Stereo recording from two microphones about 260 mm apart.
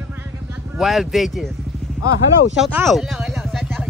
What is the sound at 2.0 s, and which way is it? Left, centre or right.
Speech, left.